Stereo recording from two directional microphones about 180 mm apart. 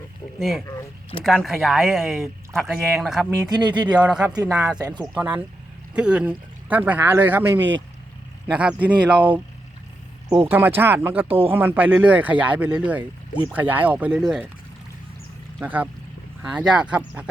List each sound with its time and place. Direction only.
0.3 s speech: centre (ahead or behind)
0.6 s speech: 15° left (ahead or behind)
1.2 s speech: centre (ahead or behind)
3.5 s speech: 25° right (ahead or behind)
4.1 s speech: 5° right (ahead or behind)
10.4 s speech: 10° right (ahead or behind)
15.6 s speech: 10° right (ahead or behind)